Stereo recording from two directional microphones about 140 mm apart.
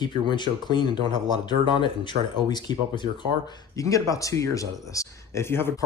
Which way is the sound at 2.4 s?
30° left (ahead or behind).